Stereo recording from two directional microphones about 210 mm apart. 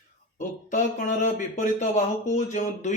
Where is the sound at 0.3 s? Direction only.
35° left (ahead or behind).